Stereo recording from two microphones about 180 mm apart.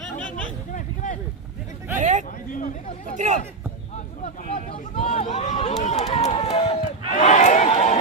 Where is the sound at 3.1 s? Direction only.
40° right (ahead or behind).